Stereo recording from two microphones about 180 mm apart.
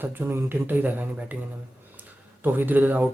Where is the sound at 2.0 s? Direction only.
10° right (ahead or behind).